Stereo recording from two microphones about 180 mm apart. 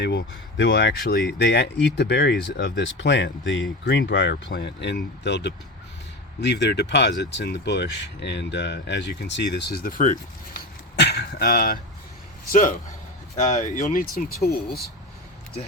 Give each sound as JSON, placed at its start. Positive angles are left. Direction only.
{"t": 0.0, "sound": "speech", "side_deg": 75}
{"t": 11.0, "sound": "speech", "side_deg": 65}